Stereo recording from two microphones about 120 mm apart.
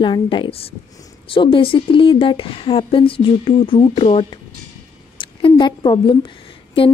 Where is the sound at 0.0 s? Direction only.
40° left (ahead or behind).